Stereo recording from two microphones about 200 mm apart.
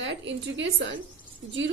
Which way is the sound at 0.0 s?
65° right (ahead or behind).